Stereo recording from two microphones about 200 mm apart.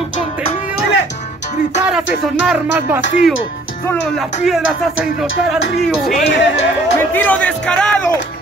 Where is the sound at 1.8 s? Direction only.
5° right (ahead or behind).